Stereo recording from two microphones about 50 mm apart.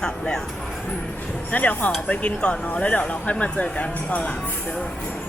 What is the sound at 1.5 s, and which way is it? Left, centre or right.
Speech, left.